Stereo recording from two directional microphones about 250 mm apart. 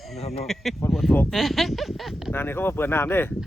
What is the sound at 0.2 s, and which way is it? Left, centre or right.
Speech, left.